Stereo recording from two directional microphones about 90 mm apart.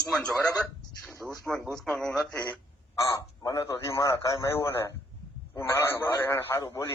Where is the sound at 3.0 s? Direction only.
40° left (ahead or behind); by 6.5 s 25° left (ahead or behind).